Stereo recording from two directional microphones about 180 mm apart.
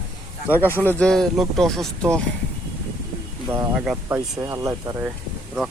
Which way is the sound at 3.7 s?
5° right (ahead or behind).